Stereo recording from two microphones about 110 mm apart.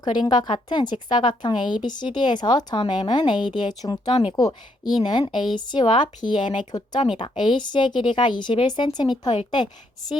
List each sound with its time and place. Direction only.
0.0 s a woman's voice: 40° left (ahead or behind)
4.1 s speech: 55° left (ahead or behind)
4.4 s a woman's voice: 40° left (ahead or behind)